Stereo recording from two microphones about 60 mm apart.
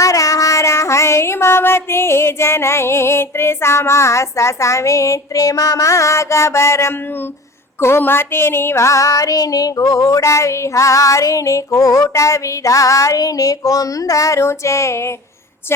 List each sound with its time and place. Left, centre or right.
0.0 s child singing: left
14.4 s female singing: left